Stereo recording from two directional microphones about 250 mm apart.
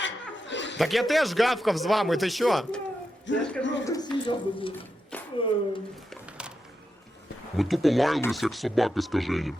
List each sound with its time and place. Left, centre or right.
0.0 s chuckle: left
0.8 s a man's voice: centre
3.3 s speech: left
3.8 s speech: centre
5.1 s a sound: centre
7.5 s a man's voice: centre